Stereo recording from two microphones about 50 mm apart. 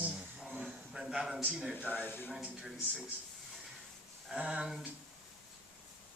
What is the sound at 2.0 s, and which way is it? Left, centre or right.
Speech, left.